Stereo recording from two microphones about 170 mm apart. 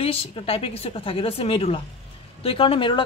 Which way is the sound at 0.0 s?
35° left (ahead or behind).